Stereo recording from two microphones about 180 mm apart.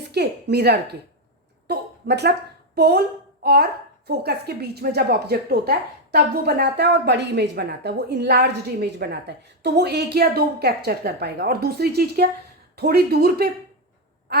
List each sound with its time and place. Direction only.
0.1 s a woman's voice: 65° right (ahead or behind)